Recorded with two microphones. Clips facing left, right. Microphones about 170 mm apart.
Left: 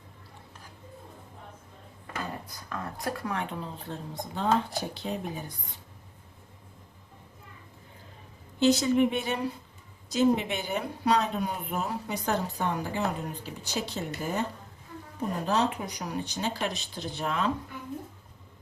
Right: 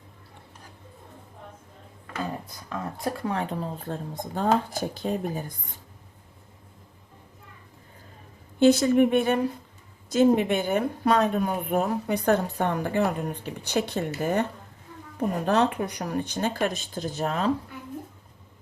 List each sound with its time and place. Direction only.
2.6 s speech: 20° right (ahead or behind)
3.6 s speech: 50° right (ahead or behind)
8.5 s speech: 55° right (ahead or behind)